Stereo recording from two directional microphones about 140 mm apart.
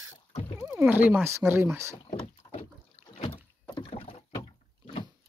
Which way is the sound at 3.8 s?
40° left (ahead or behind).